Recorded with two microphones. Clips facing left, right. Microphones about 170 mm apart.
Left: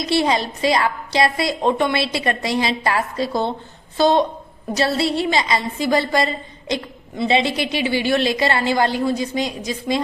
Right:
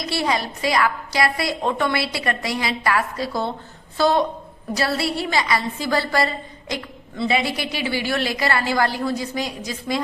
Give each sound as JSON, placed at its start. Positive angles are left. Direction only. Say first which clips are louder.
{"t": 0.0, "sound": "a woman's voice", "louder": "left 4 dB", "side_deg": 20}